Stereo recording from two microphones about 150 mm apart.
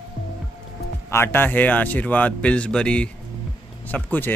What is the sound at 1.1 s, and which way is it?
A man's voice, 15° left (ahead or behind).